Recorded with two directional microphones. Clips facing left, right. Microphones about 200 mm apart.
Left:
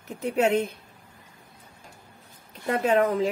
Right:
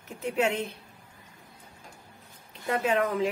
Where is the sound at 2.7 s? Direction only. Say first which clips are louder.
Left 4 dB; 35° left (ahead or behind).